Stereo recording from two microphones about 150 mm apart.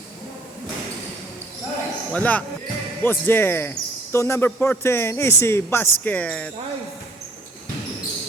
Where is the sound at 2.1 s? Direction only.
10° left (ahead or behind).